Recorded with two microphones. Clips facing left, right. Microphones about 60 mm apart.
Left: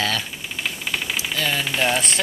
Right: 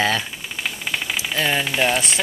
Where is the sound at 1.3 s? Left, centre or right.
Right.